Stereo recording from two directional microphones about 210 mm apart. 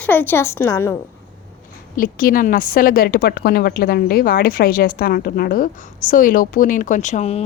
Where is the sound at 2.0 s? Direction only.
40° left (ahead or behind).